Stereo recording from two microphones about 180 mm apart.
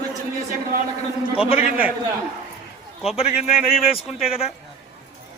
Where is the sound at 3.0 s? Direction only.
35° left (ahead or behind).